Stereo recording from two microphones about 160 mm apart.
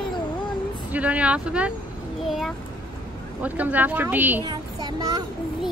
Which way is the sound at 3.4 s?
10° right (ahead or behind).